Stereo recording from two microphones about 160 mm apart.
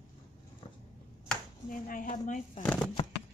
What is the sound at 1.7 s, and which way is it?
Speech, 55° left (ahead or behind).